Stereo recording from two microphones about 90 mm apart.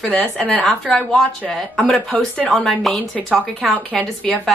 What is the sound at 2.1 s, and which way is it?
Speech, 15° left (ahead or behind).